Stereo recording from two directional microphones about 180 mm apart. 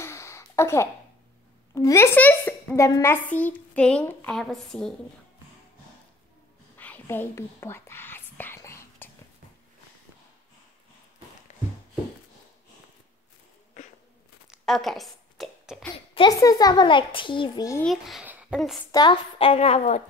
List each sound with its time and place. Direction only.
0.0 s a sound: 15° left (ahead or behind)
1.8 s a child's voice: 15° left (ahead or behind)
6.8 s whispering: 10° left (ahead or behind)
14.5 s a sound: centre (ahead or behind)
16.2 s a child's voice: 20° left (ahead or behind)
17.8 s a child's voice: centre (ahead or behind)
18.9 s a woman's voice: 25° left (ahead or behind)